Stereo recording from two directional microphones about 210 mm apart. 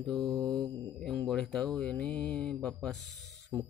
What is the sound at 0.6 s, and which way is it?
Mantra, 20° right (ahead or behind).